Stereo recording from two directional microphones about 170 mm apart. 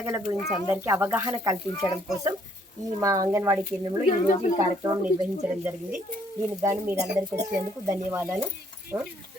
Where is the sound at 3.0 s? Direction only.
20° right (ahead or behind).